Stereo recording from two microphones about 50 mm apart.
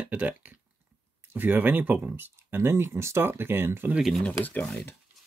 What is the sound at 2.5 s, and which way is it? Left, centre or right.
Speech, right.